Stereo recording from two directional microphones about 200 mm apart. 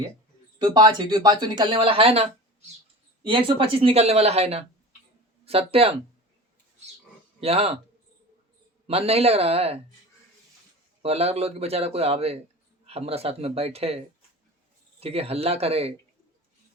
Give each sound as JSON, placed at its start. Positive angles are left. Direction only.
{"t": 0.6, "sound": "speech", "side_deg": -20}
{"t": 7.4, "sound": "speech", "side_deg": -30}
{"t": 8.9, "sound": "speech", "side_deg": -30}
{"t": 11.0, "sound": "speech", "side_deg": -30}
{"t": 15.0, "sound": "speech", "side_deg": -30}